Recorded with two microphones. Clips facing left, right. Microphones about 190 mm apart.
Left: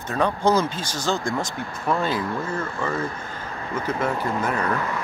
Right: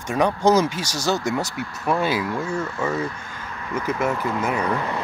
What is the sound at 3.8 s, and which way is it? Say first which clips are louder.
Speech: right 1 dB; 10° right (ahead or behind).